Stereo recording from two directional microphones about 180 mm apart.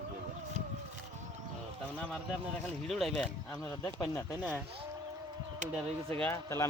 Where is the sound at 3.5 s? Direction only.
15° left (ahead or behind).